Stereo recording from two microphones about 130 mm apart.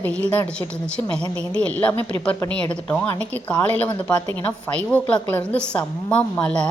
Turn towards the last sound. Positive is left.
turn(degrees=5)  # may be behind; listen again after turning